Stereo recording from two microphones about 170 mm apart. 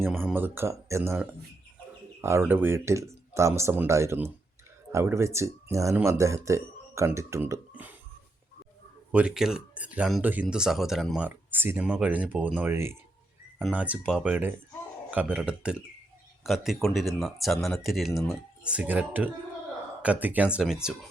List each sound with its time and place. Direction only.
0.0 s speech: 10° right (ahead or behind)
2.5 s speech: 10° right (ahead or behind)
9.1 s speech: 5° right (ahead or behind)